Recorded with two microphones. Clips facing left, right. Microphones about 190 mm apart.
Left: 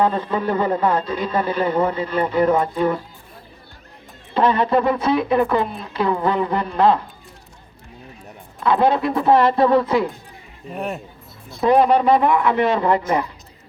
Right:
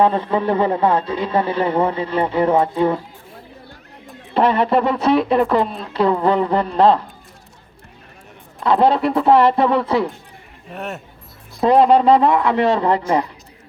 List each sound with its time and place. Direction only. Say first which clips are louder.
0.0 s speech: right 3 dB; 25° right (ahead or behind)
4.4 s speech: right 1 dB; 30° right (ahead or behind)
8.6 s speech: right 2 dB; 30° right (ahead or behind)
10.8 s speech: left 2 dB; centre (ahead or behind)
11.6 s speech: right 2 dB; 30° right (ahead or behind)